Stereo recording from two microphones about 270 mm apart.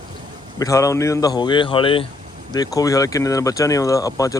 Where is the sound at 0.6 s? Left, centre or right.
Centre.